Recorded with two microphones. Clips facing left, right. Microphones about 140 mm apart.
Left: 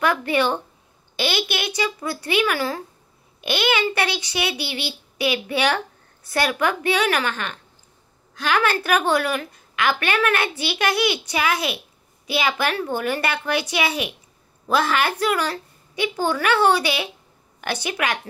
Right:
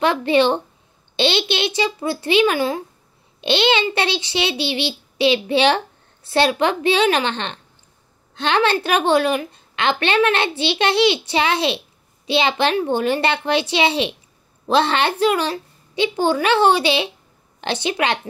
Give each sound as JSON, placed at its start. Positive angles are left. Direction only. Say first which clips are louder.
{"t": 0.0, "sound": "a woman's voice", "louder": "right 4 dB", "side_deg": -25}